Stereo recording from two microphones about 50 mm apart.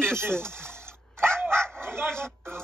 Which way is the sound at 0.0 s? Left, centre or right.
Right.